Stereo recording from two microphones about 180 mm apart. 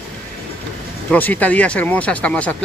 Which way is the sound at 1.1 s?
10° left (ahead or behind).